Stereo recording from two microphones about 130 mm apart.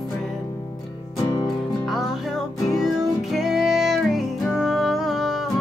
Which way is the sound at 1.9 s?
Centre (ahead or behind).